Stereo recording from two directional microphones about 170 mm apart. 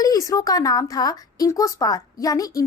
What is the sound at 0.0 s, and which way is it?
A woman's voice, 20° left (ahead or behind).